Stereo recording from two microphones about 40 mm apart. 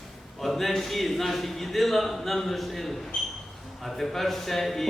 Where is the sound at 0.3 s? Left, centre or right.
Centre.